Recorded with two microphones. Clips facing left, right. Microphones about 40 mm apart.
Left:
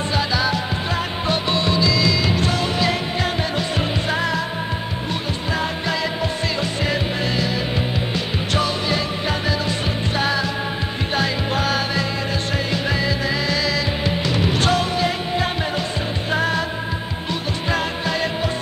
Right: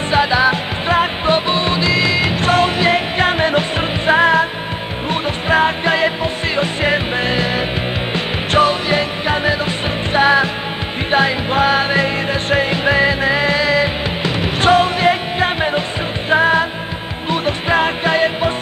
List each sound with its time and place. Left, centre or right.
0.1 s music: right